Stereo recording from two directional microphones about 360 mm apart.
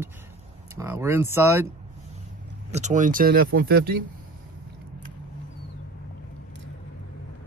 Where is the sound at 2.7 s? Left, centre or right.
Centre.